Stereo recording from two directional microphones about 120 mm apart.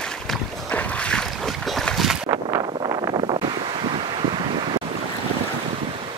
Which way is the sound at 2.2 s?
35° right (ahead or behind).